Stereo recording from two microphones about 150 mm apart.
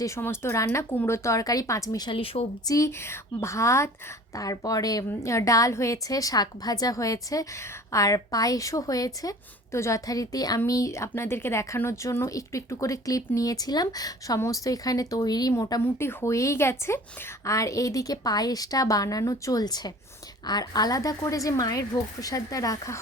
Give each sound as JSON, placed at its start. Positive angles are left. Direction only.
{"t": 0.0, "sound": "a woman's voice", "side_deg": 20}
{"t": 2.0, "sound": "speech", "side_deg": 40}
{"t": 2.6, "sound": "a woman's voice", "side_deg": 20}